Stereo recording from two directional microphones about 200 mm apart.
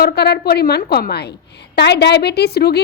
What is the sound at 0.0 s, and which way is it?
A woman's voice, 55° left (ahead or behind).